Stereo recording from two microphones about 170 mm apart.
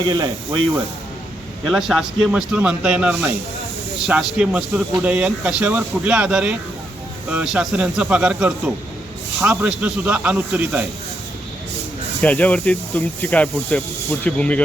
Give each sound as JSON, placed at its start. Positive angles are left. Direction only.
{"t": 0.0, "sound": "speech", "side_deg": -25}
{"t": 1.6, "sound": "a man's voice", "side_deg": 0}
{"t": 12.2, "sound": "speech", "side_deg": 10}